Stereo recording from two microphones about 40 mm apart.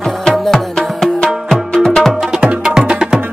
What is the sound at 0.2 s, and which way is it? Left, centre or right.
Music, centre.